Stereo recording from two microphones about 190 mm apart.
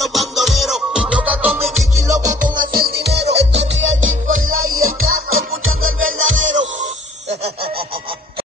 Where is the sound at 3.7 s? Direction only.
80° right.